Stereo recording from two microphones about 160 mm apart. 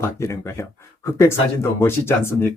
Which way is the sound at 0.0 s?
15° left (ahead or behind).